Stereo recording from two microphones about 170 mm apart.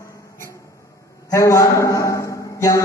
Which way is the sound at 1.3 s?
20° left (ahead or behind).